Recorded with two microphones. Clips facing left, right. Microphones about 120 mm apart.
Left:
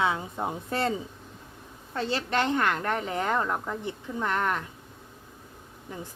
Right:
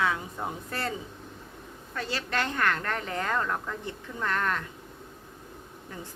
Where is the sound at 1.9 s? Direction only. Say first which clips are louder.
Left 4 dB; 25° left (ahead or behind).